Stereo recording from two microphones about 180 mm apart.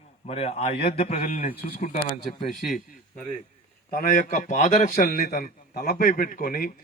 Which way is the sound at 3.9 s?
45° left (ahead or behind).